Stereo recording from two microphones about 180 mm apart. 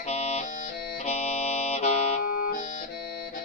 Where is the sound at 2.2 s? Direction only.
55° left (ahead or behind).